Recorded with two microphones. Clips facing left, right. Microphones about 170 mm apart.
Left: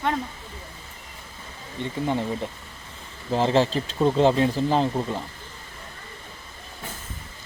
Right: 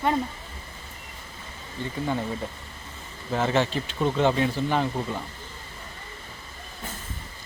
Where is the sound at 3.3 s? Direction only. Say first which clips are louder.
Left 3 dB; 30° left (ahead or behind).